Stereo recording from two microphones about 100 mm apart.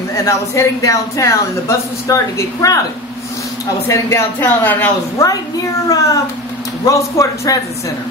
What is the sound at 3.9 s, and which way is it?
Speech, 30° left (ahead or behind).